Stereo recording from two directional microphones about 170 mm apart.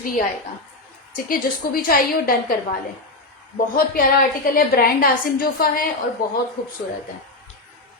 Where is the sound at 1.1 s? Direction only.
55° left (ahead or behind).